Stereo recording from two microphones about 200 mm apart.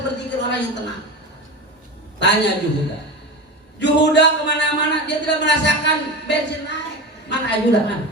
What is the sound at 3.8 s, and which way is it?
Speech, 60° left (ahead or behind).